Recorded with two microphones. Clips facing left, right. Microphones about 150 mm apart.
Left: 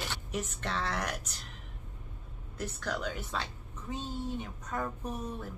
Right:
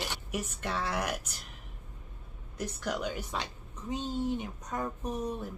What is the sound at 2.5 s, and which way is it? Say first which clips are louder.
A woman's voice: right 2 dB; 15° right (ahead or behind).